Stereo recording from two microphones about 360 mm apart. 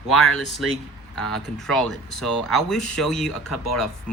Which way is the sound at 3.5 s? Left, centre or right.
Left.